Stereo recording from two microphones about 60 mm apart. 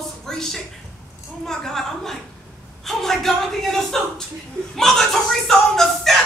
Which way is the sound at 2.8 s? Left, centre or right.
Centre.